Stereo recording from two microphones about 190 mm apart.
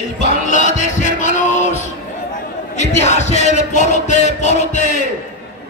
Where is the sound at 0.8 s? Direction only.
40° left (ahead or behind).